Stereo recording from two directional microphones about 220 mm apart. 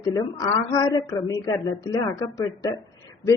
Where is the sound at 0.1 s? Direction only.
15° left (ahead or behind).